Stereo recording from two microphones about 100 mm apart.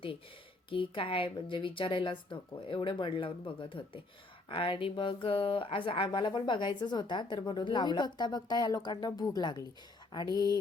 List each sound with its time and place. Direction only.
0.7 s speech: 60° left (ahead or behind)
6.1 s speech: 50° left (ahead or behind)